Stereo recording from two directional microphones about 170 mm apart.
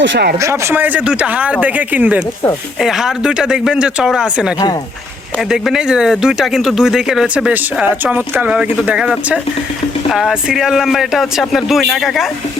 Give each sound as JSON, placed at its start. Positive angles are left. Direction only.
{"t": 0.0, "sound": "speech", "side_deg": -80}
{"t": 0.3, "sound": "speech", "side_deg": -15}